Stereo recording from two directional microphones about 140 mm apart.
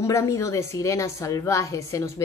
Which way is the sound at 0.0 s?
20° left (ahead or behind).